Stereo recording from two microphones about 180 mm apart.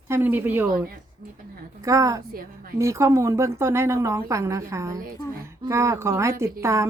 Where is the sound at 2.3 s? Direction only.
55° right (ahead or behind).